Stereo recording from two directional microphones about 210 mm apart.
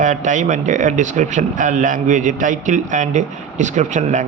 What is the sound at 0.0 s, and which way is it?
Speech, 35° right (ahead or behind).